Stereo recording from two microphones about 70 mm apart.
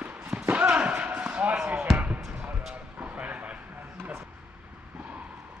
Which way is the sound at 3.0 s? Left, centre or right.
Right.